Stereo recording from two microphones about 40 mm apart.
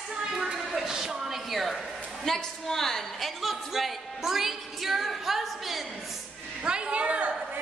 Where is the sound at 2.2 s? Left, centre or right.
Centre.